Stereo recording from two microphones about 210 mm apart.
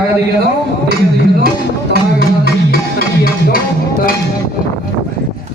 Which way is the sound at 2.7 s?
45° left (ahead or behind).